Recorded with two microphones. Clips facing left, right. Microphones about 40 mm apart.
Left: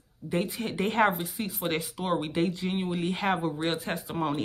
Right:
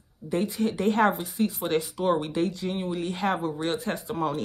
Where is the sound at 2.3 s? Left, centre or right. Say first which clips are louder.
Right 1 dB; centre.